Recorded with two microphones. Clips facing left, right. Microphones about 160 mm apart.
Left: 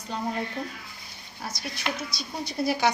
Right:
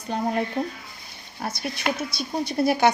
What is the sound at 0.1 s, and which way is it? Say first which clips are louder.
A woman's voice: right 6 dB; 55° right (ahead or behind).